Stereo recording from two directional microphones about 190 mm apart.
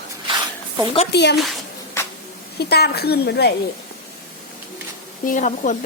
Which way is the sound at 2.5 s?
55° left (ahead or behind).